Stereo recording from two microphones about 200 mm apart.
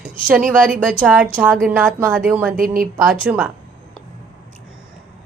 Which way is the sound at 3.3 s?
5° right (ahead or behind).